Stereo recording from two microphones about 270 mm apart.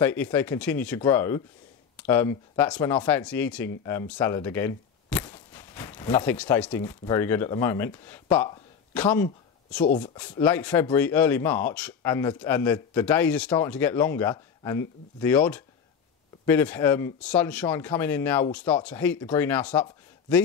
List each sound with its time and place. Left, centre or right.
0.0 s speech: centre
9.8 s speech: left
10.1 s speech: centre